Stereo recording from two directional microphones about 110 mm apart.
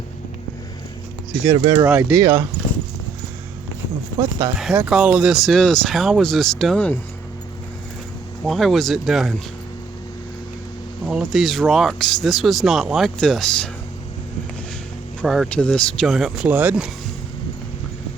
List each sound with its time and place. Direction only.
1.5 s speech: 40° right (ahead or behind)
1.8 s speech: 20° right (ahead or behind)
4.9 s speech: 10° right (ahead or behind)
6.7 s speech: 15° left (ahead or behind)
8.4 s speech: centre (ahead or behind)
11.0 s speech: 5° right (ahead or behind)
15.2 s speech: 5° left (ahead or behind)
16.5 s speech: 15° right (ahead or behind)